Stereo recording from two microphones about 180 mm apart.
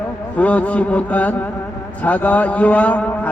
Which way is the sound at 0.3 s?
5° left (ahead or behind).